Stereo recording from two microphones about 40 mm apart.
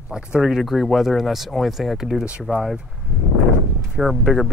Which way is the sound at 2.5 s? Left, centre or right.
Right.